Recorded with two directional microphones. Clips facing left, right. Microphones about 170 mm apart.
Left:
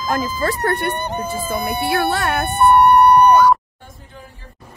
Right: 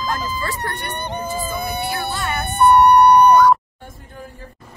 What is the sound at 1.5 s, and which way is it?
Speech, 65° left (ahead or behind).